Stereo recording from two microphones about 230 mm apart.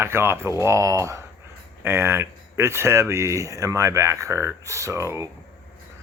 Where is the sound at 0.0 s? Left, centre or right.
Centre.